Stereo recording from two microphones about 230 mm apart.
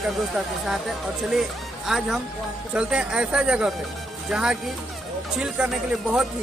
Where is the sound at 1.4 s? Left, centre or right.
Centre.